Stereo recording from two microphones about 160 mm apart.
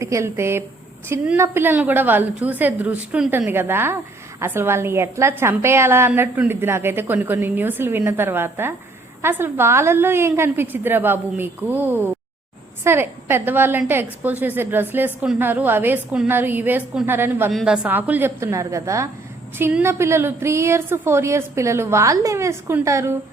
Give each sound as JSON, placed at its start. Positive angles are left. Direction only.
{"t": 0.0, "sound": "a woman's voice", "side_deg": -20}
{"t": 17.5, "sound": "a woman's voice", "side_deg": 0}
{"t": 17.8, "sound": "a woman's voice", "side_deg": -10}